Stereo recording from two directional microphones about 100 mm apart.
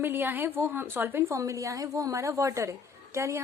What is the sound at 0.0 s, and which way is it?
A woman's voice, 20° right (ahead or behind).